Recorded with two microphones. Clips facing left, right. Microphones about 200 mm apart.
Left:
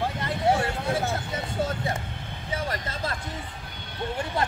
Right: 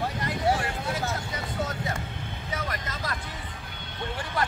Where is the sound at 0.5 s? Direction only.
30° left (ahead or behind).